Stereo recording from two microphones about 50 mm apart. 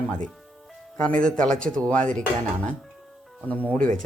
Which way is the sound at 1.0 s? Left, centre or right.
Centre.